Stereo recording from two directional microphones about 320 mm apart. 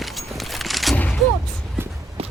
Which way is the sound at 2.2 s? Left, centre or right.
Centre.